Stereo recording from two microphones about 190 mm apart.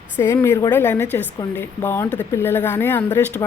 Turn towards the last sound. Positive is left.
turn(degrees=10)  # may be behind; listen again after turning